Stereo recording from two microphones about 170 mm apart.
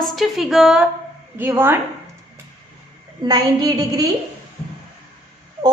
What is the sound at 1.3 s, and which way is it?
Speech, 15° right (ahead or behind).